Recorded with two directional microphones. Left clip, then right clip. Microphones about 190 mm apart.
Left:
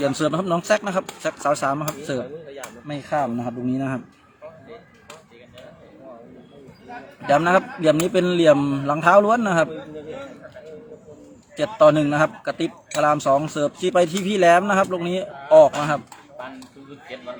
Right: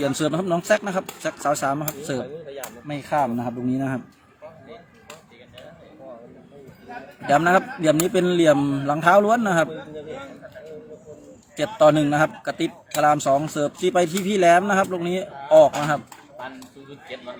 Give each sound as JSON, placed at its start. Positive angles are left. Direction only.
{"t": 0.0, "sound": "a man's voice", "side_deg": 10}
{"t": 3.7, "sound": "a man's voice", "side_deg": 0}
{"t": 7.3, "sound": "a man's voice", "side_deg": 5}
{"t": 11.8, "sound": "a man's voice", "side_deg": 0}
{"t": 17.1, "sound": "a man's voice", "side_deg": -55}